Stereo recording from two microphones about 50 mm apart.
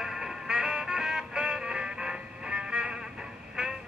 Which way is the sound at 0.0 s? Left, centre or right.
Centre.